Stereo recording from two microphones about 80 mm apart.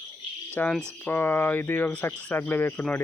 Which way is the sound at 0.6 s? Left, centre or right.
Left.